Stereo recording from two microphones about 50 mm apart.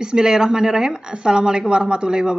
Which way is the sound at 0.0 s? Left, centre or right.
Centre.